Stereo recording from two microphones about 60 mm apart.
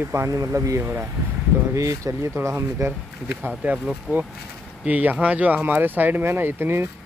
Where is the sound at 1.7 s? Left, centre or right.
Right.